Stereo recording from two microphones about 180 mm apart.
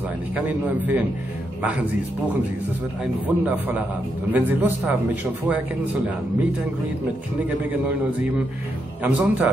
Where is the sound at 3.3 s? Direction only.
10° right (ahead or behind).